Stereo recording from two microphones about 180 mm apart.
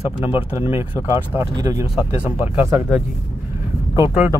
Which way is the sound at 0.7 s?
15° right (ahead or behind).